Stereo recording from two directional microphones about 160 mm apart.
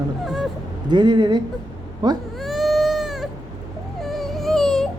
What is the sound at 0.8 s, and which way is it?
Speech, 25° right (ahead or behind).